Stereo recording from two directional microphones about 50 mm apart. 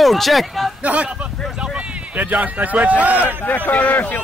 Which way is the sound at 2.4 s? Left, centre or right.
Right.